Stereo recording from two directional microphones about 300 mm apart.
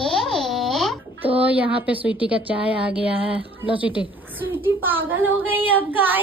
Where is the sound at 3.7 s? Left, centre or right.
Centre.